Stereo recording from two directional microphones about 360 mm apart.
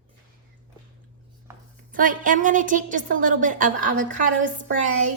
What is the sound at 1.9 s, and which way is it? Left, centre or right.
A woman's voice, right.